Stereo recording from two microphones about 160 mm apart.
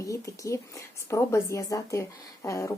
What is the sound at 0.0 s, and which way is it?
A woman's voice, 20° left (ahead or behind).